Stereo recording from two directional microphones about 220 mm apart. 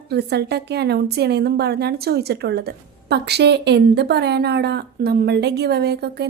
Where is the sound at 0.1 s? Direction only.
50° right (ahead or behind).